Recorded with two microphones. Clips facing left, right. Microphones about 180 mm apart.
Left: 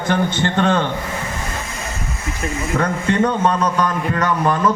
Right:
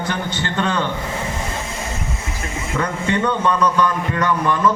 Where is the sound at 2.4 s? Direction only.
20° left (ahead or behind).